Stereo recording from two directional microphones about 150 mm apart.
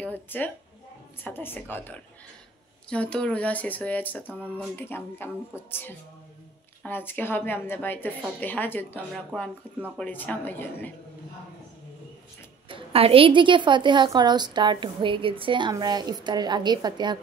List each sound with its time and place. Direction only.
0.0 s a sound: 10° left (ahead or behind)
1.2 s speech: 15° left (ahead or behind)
9.1 s speech: centre (ahead or behind)
12.6 s a woman's voice: 35° right (ahead or behind)